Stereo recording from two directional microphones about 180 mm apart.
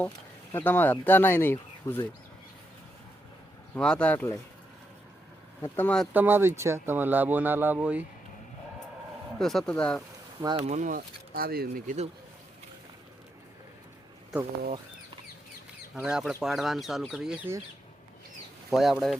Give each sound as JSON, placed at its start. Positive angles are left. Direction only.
{"t": 0.5, "sound": "speech", "side_deg": 10}
{"t": 3.8, "sound": "speech", "side_deg": 5}
{"t": 5.6, "sound": "speech", "side_deg": 10}
{"t": 6.1, "sound": "speech", "side_deg": -10}
{"t": 9.4, "sound": "speech", "side_deg": 0}
{"t": 10.7, "sound": "speech", "side_deg": -45}
{"t": 16.0, "sound": "speech", "side_deg": -5}
{"t": 18.7, "sound": "speech", "side_deg": 0}